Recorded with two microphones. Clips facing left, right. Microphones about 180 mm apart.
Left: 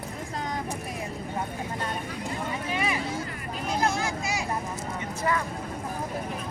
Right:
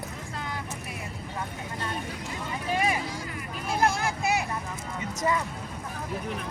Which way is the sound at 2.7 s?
45° right (ahead or behind).